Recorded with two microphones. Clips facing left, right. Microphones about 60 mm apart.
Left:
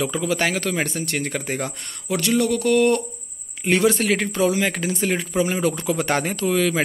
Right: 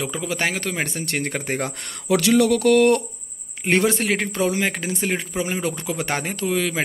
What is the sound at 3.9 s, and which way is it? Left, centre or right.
Speech, right.